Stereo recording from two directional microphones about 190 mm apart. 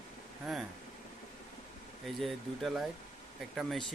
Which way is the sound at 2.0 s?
Centre (ahead or behind).